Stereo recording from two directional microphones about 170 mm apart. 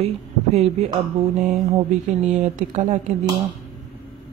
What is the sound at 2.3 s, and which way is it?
Speech, 45° right (ahead or behind).